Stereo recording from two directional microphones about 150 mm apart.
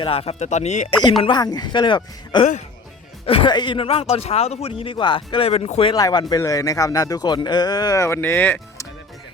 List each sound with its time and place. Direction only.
0.0 s speech: 40° left (ahead or behind)
1.2 s speech: 30° left (ahead or behind)
5.9 s speech: 25° left (ahead or behind)